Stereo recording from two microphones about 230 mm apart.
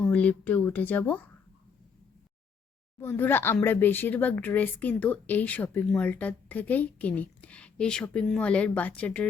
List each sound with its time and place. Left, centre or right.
0.0 s speech: centre
3.0 s speech: centre